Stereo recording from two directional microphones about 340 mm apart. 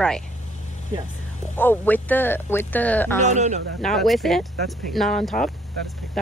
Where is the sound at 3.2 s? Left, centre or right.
Right.